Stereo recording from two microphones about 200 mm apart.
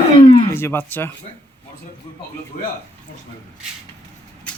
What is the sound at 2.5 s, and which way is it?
Speech, 45° left (ahead or behind).